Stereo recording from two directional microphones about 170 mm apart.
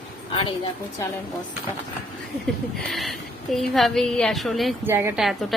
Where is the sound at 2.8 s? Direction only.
Centre (ahead or behind).